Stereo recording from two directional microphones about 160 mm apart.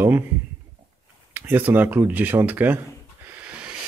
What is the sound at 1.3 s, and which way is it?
Speech, 10° right (ahead or behind).